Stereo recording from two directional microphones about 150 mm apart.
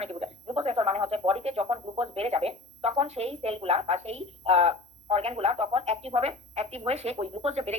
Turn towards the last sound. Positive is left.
turn(degrees=-45)  # may be behind; listen again after turning